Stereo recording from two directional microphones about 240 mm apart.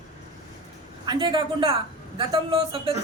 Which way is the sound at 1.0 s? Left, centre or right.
Centre.